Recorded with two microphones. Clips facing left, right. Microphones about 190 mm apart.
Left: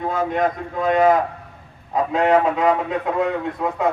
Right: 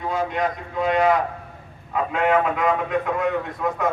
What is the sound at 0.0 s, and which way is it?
A man's voice, 50° left (ahead or behind).